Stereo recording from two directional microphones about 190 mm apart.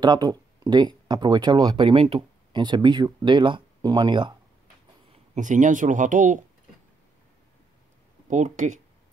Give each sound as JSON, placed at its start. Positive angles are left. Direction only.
{"t": 0.0, "sound": "speech", "side_deg": -20}
{"t": 5.3, "sound": "speech", "side_deg": -40}
{"t": 8.3, "sound": "speech", "side_deg": -40}